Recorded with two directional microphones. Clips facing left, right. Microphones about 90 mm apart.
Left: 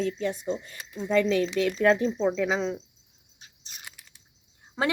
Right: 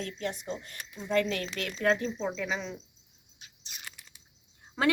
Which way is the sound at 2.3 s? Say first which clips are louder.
Left 8 dB; 75° left (ahead or behind).